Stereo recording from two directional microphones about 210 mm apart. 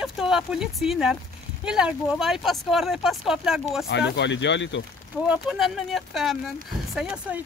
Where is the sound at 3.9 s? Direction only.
55° left (ahead or behind).